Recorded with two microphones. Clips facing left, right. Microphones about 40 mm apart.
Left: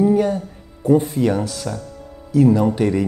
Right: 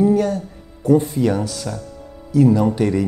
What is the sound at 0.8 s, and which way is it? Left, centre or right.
Speech, centre.